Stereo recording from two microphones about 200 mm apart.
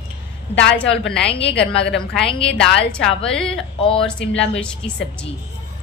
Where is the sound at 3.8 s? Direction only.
25° left (ahead or behind).